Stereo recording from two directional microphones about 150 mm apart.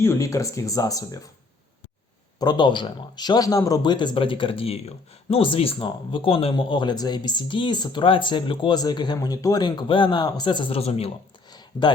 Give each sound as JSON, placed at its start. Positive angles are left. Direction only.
{"t": 0.0, "sound": "speech", "side_deg": 20}
{"t": 2.4, "sound": "speech", "side_deg": 30}
{"t": 11.7, "sound": "speech", "side_deg": 25}